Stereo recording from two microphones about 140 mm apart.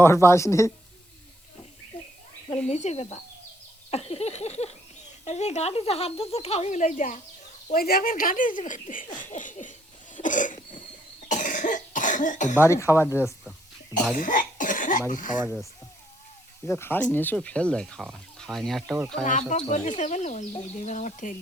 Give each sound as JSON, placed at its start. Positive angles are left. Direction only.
{"t": 0.0, "sound": "a woman's voice", "side_deg": 20}
{"t": 2.6, "sound": "speech", "side_deg": 55}
{"t": 7.7, "sound": "speech", "side_deg": 90}
{"t": 10.2, "sound": "cough", "side_deg": 65}
{"t": 12.6, "sound": "a woman's voice", "side_deg": 20}
{"t": 14.2, "sound": "cough", "side_deg": 70}
{"t": 15.1, "sound": "speech", "side_deg": 70}
{"t": 16.6, "sound": "speech", "side_deg": 15}
{"t": 19.2, "sound": "speech", "side_deg": 60}